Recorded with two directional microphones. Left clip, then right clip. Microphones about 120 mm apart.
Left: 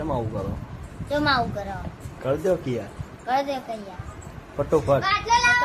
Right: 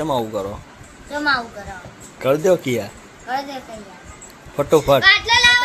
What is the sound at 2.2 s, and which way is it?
Speech, 25° right (ahead or behind).